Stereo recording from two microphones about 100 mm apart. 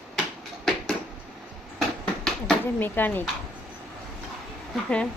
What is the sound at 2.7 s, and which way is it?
Speech, 20° left (ahead or behind).